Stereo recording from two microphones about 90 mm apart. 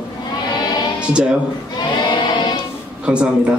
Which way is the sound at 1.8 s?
55° left (ahead or behind).